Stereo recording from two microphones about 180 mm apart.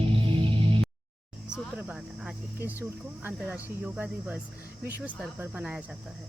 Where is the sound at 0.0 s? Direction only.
30° right (ahead or behind).